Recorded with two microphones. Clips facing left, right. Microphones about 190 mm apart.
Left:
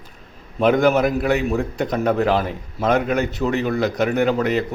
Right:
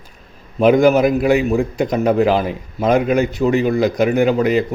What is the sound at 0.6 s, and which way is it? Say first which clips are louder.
A man's voice: right 4 dB; 10° right (ahead or behind).